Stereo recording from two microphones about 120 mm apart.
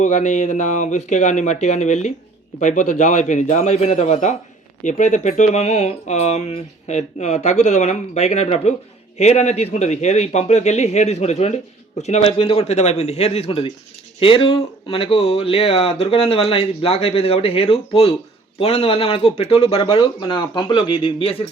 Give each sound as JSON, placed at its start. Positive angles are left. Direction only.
{"t": 0.0, "sound": "speech", "side_deg": 80}
{"t": 2.6, "sound": "speech", "side_deg": 90}
{"t": 4.8, "sound": "a man's voice", "side_deg": 90}